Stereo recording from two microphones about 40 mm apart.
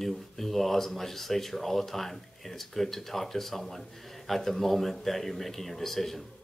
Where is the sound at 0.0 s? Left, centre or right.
Centre.